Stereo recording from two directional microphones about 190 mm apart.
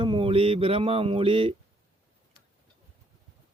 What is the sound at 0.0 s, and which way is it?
Speech, 25° right (ahead or behind).